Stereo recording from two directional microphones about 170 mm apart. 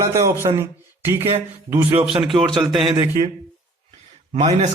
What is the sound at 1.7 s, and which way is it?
Speech, 15° right (ahead or behind).